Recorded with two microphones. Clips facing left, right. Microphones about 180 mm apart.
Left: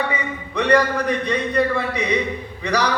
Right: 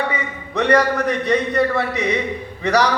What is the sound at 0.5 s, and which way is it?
A man's voice, 45° right (ahead or behind).